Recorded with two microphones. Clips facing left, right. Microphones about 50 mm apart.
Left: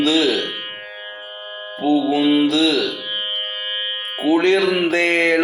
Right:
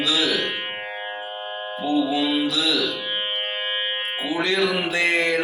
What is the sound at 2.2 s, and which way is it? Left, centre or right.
Speech, left.